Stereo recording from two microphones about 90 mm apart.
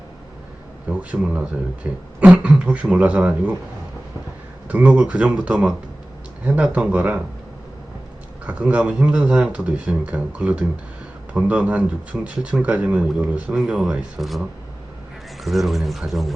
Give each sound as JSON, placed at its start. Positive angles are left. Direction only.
{"t": 0.9, "sound": "speech", "side_deg": -15}
{"t": 4.7, "sound": "speech", "side_deg": -15}
{"t": 8.4, "sound": "speech", "side_deg": -15}
{"t": 15.4, "sound": "speech", "side_deg": 0}